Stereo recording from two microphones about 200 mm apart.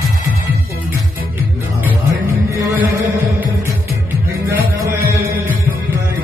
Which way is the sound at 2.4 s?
10° right (ahead or behind).